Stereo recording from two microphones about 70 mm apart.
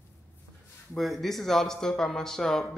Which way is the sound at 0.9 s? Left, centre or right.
Centre.